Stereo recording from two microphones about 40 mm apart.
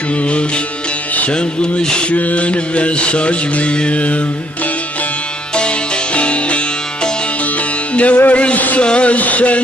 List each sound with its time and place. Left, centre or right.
1.3 s music: left
2.1 s mantra: left
6.1 s music: left
7.9 s music: left
8.3 s a sound: left
8.7 s mantra: left